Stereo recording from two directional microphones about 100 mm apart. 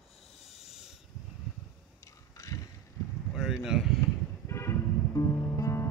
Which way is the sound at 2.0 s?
35° left (ahead or behind).